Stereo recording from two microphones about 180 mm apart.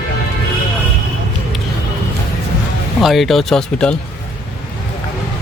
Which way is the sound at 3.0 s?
Centre (ahead or behind).